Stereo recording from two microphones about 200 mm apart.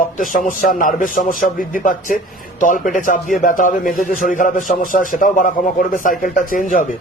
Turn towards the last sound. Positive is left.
turn(degrees=40)  # may be behind; listen again after turning